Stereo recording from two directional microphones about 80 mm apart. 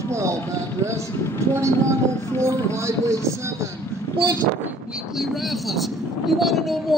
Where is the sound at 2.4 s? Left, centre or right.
Right.